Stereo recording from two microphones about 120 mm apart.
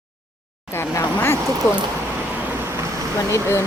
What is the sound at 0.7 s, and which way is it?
Speech, 20° left (ahead or behind).